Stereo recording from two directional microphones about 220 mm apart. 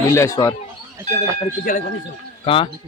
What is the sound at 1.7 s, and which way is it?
Speech, 40° left (ahead or behind).